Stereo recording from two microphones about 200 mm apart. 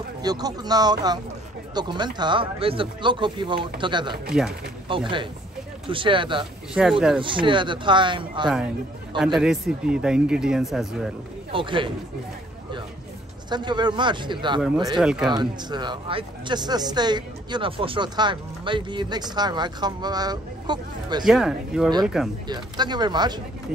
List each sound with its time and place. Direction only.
0.2 s speech: 20° right (ahead or behind)
4.3 s speech: centre (ahead or behind)
4.9 s speech: 25° right (ahead or behind)
6.7 s speech: 5° right (ahead or behind)
7.2 s speech: 25° right (ahead or behind)
9.2 s speech: 5° right (ahead or behind)
11.5 s speech: 25° right (ahead or behind)
13.5 s speech: 20° right (ahead or behind)
15.0 s speech: 5° right (ahead or behind)
15.2 s speech: 20° right (ahead or behind)
21.2 s speech: centre (ahead or behind)
22.5 s speech: 20° right (ahead or behind)